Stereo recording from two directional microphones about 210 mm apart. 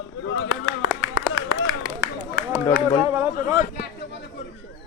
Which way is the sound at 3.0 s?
10° right (ahead or behind).